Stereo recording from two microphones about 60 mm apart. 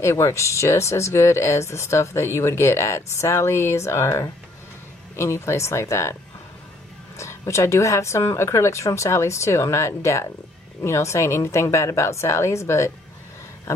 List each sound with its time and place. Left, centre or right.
0.0 s speech: left
7.2 s speech: left